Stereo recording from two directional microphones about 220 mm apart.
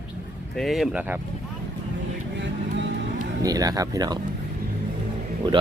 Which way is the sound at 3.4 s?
15° right (ahead or behind).